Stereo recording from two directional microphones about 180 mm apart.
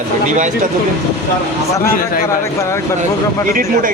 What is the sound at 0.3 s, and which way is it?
Speech, 45° right (ahead or behind).